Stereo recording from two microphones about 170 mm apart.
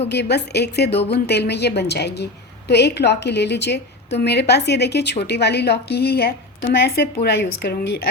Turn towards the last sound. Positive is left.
turn(degrees=75)  # may be behind; listen again after turning